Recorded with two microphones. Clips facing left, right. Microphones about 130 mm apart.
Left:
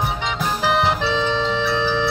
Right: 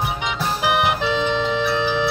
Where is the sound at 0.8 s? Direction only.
15° right (ahead or behind).